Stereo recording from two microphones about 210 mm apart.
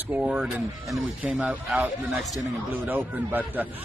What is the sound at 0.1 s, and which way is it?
A man's voice, 5° right (ahead or behind).